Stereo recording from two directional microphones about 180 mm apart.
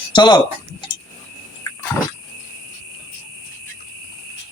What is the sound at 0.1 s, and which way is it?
Speech, 25° left (ahead or behind).